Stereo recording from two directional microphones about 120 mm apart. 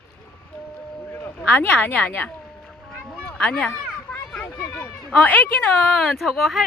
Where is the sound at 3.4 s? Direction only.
10° left (ahead or behind).